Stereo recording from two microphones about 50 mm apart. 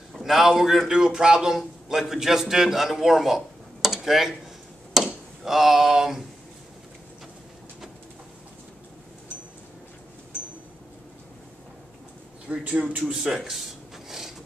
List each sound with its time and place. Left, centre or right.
0.2 s a man's voice: centre
4.9 s a sound: centre
12.4 s speech: right
13.1 s speech: centre
14.0 s mechanisms: centre